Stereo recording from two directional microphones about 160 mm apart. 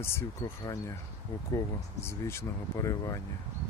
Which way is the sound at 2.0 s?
15° left (ahead or behind).